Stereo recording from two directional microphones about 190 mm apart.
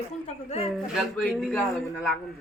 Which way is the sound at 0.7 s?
Centre (ahead or behind).